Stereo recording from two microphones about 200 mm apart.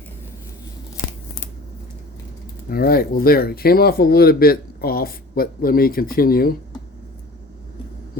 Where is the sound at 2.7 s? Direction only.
50° left (ahead or behind).